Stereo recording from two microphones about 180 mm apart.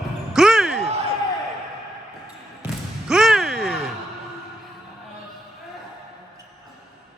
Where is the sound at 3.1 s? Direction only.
Centre (ahead or behind).